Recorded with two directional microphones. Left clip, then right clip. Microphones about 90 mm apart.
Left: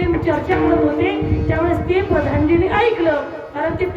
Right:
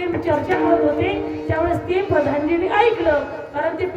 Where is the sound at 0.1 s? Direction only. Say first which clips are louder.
Even; 30° left (ahead or behind).